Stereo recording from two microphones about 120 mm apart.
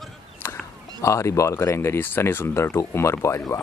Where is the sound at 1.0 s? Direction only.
25° left (ahead or behind).